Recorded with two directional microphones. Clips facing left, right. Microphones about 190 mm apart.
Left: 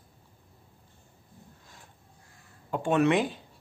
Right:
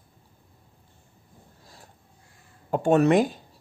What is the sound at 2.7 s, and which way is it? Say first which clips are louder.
Speech: right 5 dB; 40° right (ahead or behind).